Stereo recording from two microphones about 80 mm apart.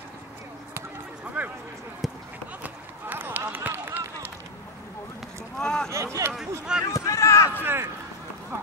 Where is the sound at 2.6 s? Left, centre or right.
Right.